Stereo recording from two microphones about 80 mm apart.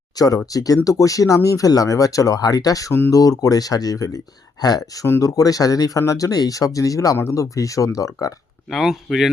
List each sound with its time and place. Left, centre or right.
0.2 s speech: left
8.7 s speech: centre